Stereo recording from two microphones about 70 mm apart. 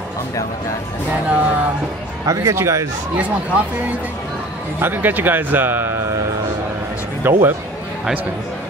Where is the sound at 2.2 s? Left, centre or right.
Right.